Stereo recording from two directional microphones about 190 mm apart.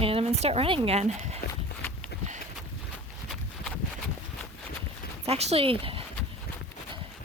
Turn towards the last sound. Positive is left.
turn(degrees=-30)  # may be behind; listen again after turning